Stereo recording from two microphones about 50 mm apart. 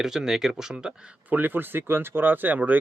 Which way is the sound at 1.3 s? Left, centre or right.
Right.